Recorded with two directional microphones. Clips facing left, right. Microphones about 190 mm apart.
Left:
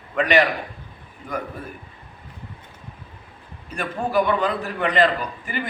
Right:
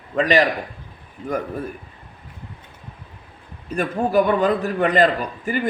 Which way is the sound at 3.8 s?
45° right (ahead or behind).